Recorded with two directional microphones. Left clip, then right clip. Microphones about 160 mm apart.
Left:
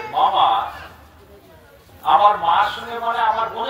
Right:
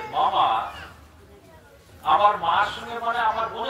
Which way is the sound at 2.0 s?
5° right (ahead or behind).